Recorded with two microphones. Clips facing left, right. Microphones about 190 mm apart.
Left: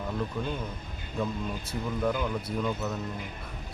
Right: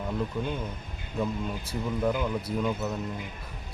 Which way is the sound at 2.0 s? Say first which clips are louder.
Right 1 dB; 10° right (ahead or behind).